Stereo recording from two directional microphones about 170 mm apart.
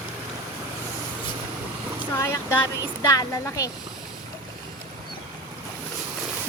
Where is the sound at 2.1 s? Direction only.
15° left (ahead or behind).